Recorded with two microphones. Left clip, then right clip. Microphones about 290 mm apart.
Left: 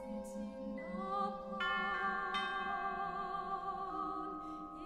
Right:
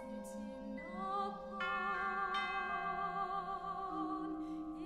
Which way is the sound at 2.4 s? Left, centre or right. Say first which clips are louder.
Even; left.